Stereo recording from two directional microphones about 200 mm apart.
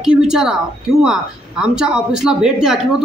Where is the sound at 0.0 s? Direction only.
5° right (ahead or behind).